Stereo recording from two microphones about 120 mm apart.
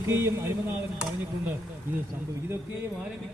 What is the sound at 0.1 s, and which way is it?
Speech, 20° right (ahead or behind).